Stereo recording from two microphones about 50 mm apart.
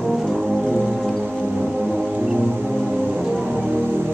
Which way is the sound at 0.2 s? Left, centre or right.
Centre.